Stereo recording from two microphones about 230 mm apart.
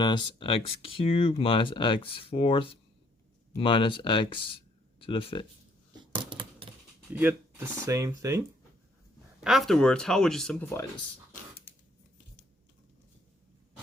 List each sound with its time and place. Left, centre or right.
0.0 s speech: centre
6.0 s coin: right
7.1 s speech: centre
9.4 s speech: centre